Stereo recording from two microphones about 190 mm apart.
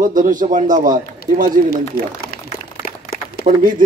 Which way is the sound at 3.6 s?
45° right (ahead or behind).